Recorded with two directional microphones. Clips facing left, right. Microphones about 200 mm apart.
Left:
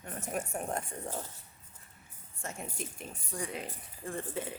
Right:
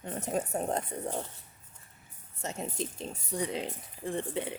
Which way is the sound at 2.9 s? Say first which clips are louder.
Right 6 dB; 25° right (ahead or behind).